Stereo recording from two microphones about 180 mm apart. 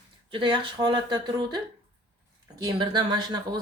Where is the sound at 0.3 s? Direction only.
25° right (ahead or behind).